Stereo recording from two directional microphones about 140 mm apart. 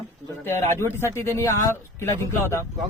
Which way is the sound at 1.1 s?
20° left (ahead or behind).